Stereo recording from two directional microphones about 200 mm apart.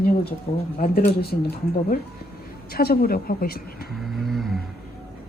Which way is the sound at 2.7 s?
50° left (ahead or behind).